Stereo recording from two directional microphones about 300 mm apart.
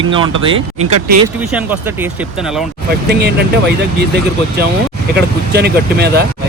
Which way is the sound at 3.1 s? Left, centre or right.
Right.